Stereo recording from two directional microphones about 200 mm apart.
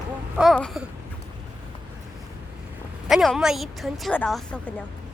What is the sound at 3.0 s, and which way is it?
A woman's voice, centre (ahead or behind).